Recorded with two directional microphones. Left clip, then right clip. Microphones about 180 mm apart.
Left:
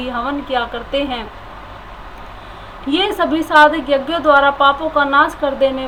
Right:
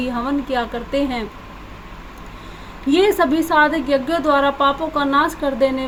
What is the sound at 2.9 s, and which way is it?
A woman's voice, 55° right (ahead or behind).